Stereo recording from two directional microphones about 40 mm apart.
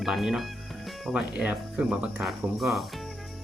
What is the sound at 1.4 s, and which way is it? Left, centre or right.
Speech, right.